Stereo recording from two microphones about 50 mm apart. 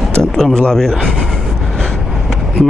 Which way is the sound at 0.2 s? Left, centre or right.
Centre.